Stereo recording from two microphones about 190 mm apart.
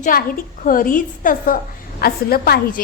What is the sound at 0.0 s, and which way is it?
A woman's voice, 50° left (ahead or behind).